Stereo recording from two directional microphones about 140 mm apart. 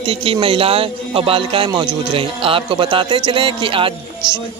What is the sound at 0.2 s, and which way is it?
Speech, 40° right (ahead or behind).